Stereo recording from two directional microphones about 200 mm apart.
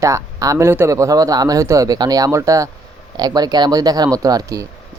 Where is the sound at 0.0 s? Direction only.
15° right (ahead or behind).